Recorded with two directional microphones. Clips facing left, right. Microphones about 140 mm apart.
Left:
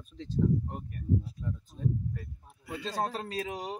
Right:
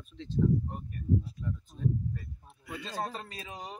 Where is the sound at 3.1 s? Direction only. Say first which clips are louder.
Left 7 dB; 90° left.